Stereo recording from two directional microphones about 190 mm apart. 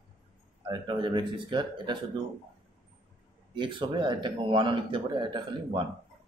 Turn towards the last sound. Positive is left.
turn(degrees=-25)  # may be behind; listen again after turning